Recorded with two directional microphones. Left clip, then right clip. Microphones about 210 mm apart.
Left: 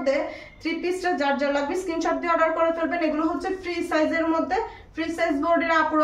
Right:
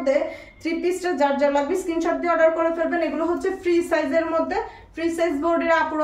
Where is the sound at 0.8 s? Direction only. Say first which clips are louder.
Right 2 dB; 10° left (ahead or behind).